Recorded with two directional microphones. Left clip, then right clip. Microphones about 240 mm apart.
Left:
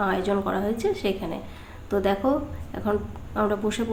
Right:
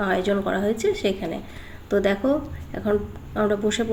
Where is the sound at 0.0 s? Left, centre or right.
Centre.